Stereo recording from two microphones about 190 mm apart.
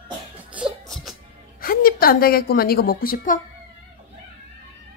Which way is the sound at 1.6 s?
50° left (ahead or behind).